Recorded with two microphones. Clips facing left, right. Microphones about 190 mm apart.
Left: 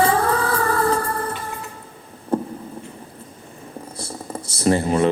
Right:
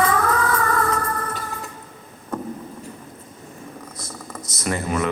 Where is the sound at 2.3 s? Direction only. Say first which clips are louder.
Left 7 dB; 30° left (ahead or behind).